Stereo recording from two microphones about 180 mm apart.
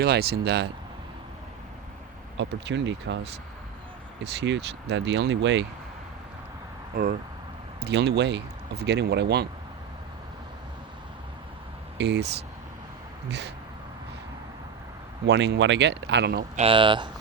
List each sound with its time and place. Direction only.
0.0 s speech: 60° right (ahead or behind)
2.4 s speech: 80° right
4.2 s speech: 75° right (ahead or behind)
6.9 s speech: 50° right (ahead or behind)
7.8 s speech: 65° right (ahead or behind)
11.9 s speech: 70° right (ahead or behind)
15.3 s speech: 75° right (ahead or behind)
16.6 s speech: 30° right (ahead or behind)